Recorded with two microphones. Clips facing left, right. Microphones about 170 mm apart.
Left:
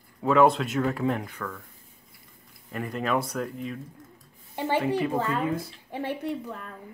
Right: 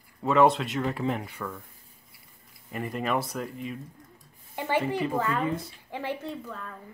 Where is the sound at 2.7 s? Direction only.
5° right (ahead or behind).